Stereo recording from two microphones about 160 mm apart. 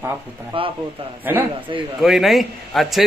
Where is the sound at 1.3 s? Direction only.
15° right (ahead or behind).